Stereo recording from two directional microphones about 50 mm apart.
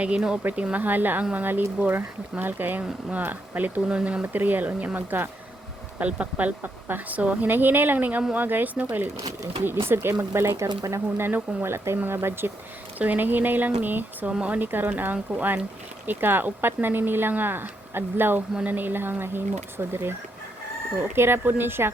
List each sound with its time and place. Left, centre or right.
0.0 s speech: right
3.8 s speech: right
4.2 s speech: right
6.0 s speech: right
9.6 s speech: right
11.6 s speech: right
13.0 s speech: right
16.0 s speech: right
21.2 s speech: right